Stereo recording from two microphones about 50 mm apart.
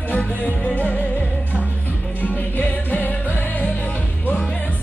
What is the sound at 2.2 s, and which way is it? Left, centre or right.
Music, left.